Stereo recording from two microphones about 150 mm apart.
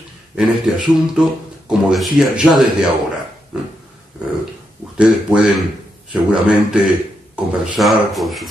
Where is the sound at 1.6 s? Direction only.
5° right (ahead or behind).